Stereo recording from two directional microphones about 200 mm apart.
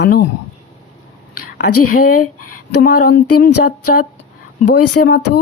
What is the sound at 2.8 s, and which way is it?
Speech, 45° left (ahead or behind).